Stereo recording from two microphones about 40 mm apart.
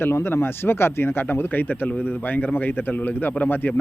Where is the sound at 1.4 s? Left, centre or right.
Left.